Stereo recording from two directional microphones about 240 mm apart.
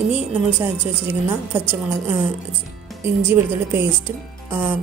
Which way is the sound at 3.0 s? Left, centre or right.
Centre.